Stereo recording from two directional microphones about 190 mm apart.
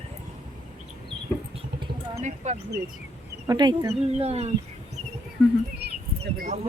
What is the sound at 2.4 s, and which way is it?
Speech, 40° right (ahead or behind).